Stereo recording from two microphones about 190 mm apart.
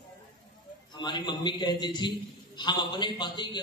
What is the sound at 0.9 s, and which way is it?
A man's voice, 25° left (ahead or behind).